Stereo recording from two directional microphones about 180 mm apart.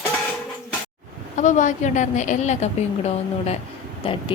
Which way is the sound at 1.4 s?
40° left (ahead or behind).